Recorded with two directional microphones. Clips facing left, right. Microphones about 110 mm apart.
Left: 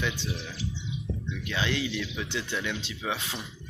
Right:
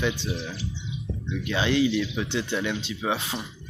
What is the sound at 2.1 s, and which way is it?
Speech, 50° right (ahead or behind).